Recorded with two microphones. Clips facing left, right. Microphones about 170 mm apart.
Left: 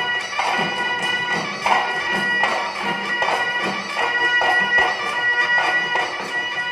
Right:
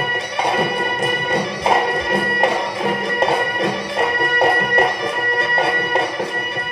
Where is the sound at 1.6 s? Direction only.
30° right (ahead or behind).